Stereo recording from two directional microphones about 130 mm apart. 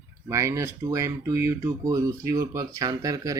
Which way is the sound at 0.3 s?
25° right (ahead or behind).